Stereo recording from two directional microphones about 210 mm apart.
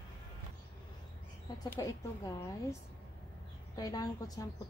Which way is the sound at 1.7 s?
15° left (ahead or behind).